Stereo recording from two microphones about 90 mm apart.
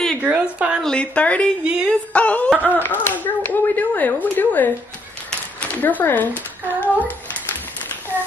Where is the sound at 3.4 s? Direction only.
20° left (ahead or behind).